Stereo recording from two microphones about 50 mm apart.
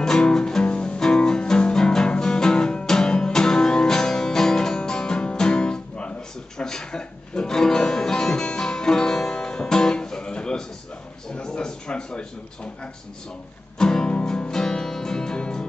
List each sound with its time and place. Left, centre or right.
0.0 s music: centre
11.3 s a sound: centre
13.7 s music: centre